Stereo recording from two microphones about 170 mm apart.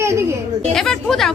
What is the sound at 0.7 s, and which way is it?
Speech, 5° left (ahead or behind).